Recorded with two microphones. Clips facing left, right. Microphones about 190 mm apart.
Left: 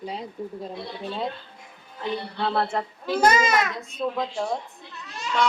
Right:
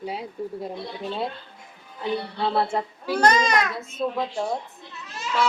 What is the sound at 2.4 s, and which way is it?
Speech, 10° right (ahead or behind).